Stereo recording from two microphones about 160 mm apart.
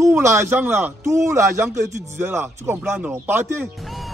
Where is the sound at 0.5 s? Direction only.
10° right (ahead or behind).